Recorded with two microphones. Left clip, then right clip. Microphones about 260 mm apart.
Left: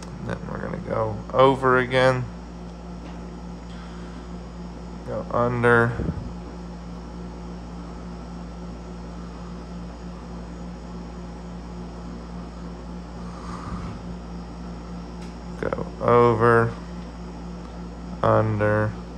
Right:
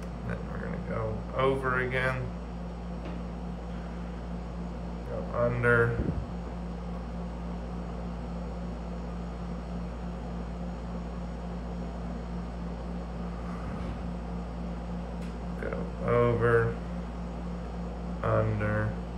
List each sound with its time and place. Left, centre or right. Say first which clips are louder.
0.9 s speech: left 13 dB; centre
5.3 s speech: left 7 dB; centre
15.6 s a sound: left 10 dB; centre
18.2 s speech: left 9 dB; centre